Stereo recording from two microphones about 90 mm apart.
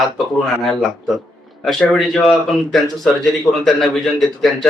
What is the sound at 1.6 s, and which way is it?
A man's voice, centre (ahead or behind).